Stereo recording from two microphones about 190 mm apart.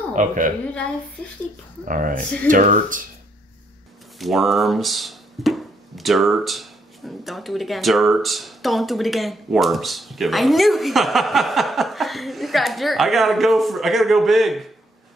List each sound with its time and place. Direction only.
0.1 s speech: 40° right (ahead or behind)
1.9 s speech: 45° right (ahead or behind)
4.2 s speech: centre (ahead or behind)